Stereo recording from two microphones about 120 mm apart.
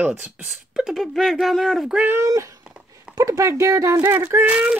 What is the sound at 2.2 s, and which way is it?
Speech, 25° right (ahead or behind).